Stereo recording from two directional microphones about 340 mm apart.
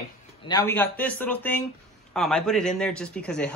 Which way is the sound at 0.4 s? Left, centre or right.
Centre.